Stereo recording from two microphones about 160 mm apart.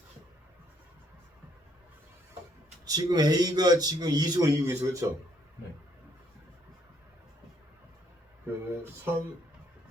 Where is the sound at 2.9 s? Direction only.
25° right (ahead or behind).